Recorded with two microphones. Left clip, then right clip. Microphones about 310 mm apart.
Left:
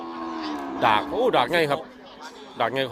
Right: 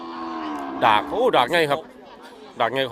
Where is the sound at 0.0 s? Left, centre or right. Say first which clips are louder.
Right 1 dB; centre.